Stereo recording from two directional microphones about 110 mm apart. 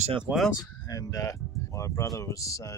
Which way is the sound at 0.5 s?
30° left (ahead or behind).